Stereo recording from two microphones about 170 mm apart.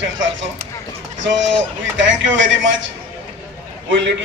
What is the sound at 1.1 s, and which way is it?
A man's voice, 90° right.